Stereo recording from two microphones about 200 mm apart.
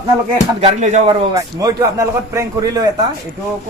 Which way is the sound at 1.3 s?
20° right (ahead or behind).